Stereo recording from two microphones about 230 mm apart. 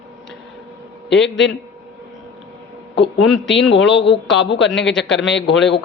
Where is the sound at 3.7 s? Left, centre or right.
Left.